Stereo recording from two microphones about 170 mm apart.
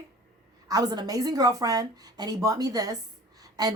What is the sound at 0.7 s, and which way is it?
A woman's voice, 25° right (ahead or behind).